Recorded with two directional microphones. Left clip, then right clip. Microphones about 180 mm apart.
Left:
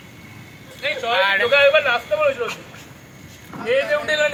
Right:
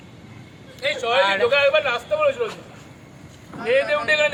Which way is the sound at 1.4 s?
60° right (ahead or behind).